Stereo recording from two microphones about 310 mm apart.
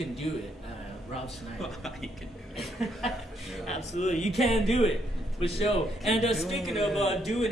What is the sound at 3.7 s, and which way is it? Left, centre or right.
Speech, left.